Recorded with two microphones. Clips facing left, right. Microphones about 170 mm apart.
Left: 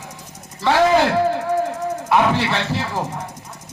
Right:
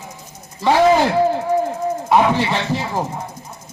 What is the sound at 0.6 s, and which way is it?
Speech, 15° right (ahead or behind).